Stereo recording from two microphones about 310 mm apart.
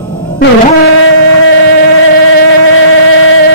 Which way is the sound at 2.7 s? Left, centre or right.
Left.